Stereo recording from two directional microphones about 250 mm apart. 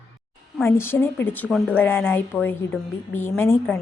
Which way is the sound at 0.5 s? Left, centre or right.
Centre.